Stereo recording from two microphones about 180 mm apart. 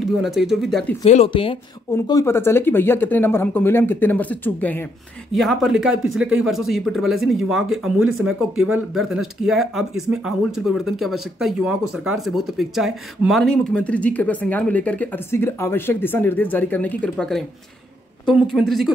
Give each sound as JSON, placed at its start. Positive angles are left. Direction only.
{"t": 0.0, "sound": "speech", "side_deg": 0}
{"t": 1.0, "sound": "speech", "side_deg": 40}
{"t": 1.3, "sound": "speech", "side_deg": 30}
{"t": 2.0, "sound": "speech", "side_deg": 15}